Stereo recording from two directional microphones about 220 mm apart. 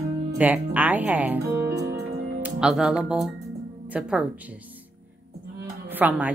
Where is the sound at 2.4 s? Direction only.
5° right (ahead or behind).